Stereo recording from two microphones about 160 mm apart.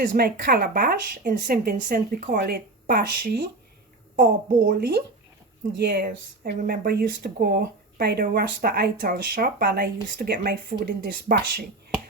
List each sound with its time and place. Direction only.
0.0 s a woman's voice: 60° right (ahead or behind)